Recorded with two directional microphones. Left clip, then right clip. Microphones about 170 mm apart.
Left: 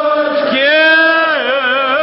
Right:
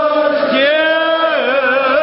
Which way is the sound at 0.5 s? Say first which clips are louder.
Left 3 dB; 30° left (ahead or behind).